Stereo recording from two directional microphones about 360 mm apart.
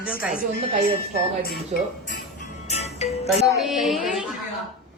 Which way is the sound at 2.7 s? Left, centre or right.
Centre.